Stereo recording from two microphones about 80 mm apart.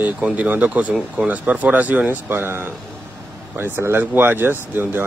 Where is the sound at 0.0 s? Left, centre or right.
Centre.